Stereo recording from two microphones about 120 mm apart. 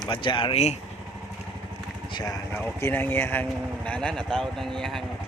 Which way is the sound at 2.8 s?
15° left (ahead or behind).